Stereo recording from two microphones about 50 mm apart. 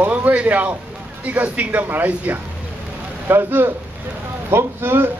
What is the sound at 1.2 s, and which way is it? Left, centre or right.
Speech, right.